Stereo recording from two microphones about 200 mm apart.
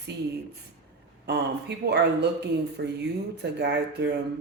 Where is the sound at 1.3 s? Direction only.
55° right (ahead or behind).